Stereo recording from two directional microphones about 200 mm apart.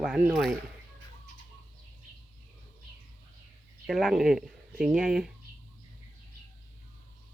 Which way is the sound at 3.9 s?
Centre (ahead or behind).